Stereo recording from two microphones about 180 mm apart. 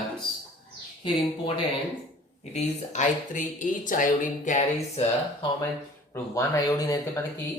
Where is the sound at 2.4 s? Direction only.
40° left (ahead or behind).